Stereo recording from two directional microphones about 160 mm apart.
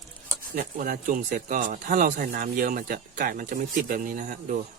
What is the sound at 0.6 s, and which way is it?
Speech, 60° right (ahead or behind).